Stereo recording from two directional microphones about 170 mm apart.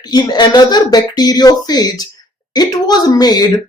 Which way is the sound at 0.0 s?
25° left (ahead or behind).